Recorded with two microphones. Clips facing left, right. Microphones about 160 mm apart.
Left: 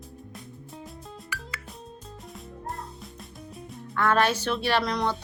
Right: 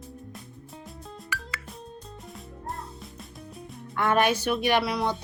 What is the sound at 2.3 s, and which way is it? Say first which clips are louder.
Music: left 1 dB; centre (ahead or behind).